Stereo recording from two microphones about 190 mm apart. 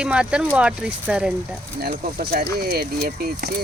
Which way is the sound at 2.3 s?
55° right (ahead or behind).